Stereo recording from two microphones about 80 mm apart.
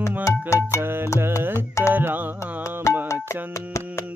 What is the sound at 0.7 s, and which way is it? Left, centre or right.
Music, right.